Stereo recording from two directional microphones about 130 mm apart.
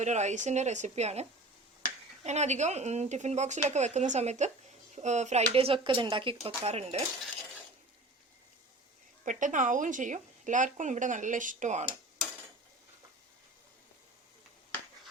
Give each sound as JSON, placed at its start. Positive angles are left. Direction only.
{"t": 0.0, "sound": "speech", "side_deg": -60}
{"t": 6.7, "sound": "speech", "side_deg": -55}
{"t": 9.2, "sound": "a woman's voice", "side_deg": -75}